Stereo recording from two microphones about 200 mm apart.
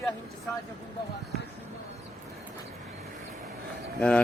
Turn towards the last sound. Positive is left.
turn(degrees=5)  # may be behind; listen again after turning